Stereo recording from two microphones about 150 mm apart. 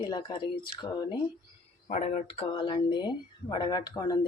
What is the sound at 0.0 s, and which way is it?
Speech, 30° left (ahead or behind).